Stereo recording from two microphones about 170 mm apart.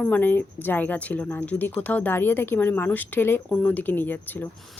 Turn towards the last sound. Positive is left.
turn(degrees=10)  # may be behind; listen again after turning